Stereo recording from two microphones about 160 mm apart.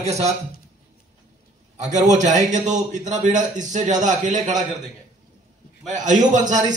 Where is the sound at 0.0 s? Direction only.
45° right (ahead or behind).